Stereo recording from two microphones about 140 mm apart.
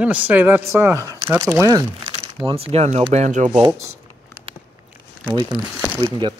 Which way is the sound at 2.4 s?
45° right (ahead or behind).